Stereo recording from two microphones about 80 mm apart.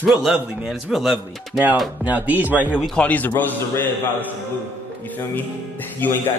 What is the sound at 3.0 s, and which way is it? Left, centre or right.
Speech, centre.